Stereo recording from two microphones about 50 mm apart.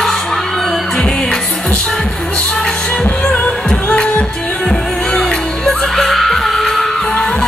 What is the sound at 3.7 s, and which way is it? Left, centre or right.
Music, centre.